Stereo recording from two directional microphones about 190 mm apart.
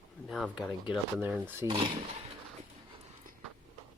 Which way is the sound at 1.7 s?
25° right (ahead or behind).